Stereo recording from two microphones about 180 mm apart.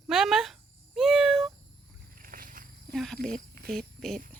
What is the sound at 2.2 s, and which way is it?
Wild animals, 50° right (ahead or behind).